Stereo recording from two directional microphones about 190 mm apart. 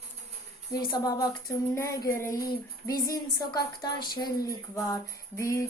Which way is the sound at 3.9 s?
50° left (ahead or behind).